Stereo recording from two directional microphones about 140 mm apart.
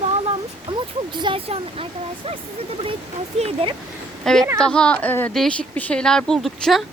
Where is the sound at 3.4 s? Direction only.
40° right (ahead or behind).